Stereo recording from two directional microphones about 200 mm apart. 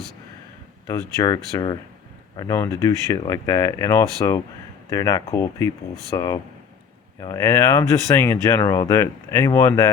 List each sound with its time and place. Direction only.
0.9 s speech: 15° left (ahead or behind)